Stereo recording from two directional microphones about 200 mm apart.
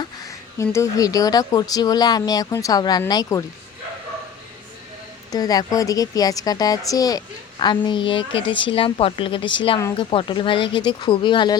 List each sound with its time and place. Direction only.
0.0 s a woman's voice: 15° left (ahead or behind)
5.3 s a woman's voice: 20° left (ahead or behind)